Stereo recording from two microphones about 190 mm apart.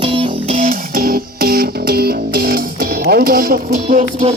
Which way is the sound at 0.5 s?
50° right (ahead or behind).